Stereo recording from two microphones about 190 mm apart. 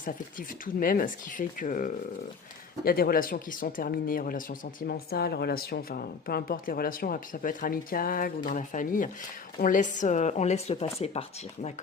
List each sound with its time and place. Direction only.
0.0 s speech: 45° left (ahead or behind)